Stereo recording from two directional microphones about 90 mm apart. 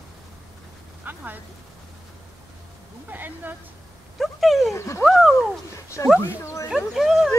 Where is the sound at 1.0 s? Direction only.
20° right (ahead or behind).